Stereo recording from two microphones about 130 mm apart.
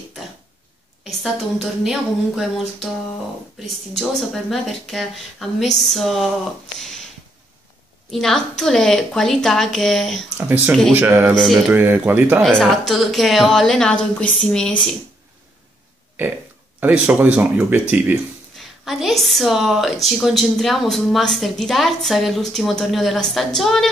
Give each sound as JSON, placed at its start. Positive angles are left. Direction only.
{"t": 1.0, "sound": "a woman's voice", "side_deg": 0}
{"t": 3.9, "sound": "a woman's voice", "side_deg": 0}
{"t": 8.1, "sound": "a woman's voice", "side_deg": 0}
{"t": 10.9, "sound": "speech", "side_deg": -10}
{"t": 11.3, "sound": "a woman's voice", "side_deg": 0}
{"t": 11.7, "sound": "speech", "side_deg": -15}
{"t": 12.4, "sound": "a woman's voice", "side_deg": 5}
{"t": 16.8, "sound": "speech", "side_deg": -10}
{"t": 18.6, "sound": "a woman's voice", "side_deg": 0}